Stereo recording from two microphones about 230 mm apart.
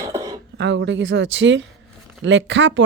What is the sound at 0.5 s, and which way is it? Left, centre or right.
Speech, right.